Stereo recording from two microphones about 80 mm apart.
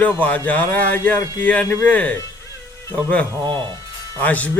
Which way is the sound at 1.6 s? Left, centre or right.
Left.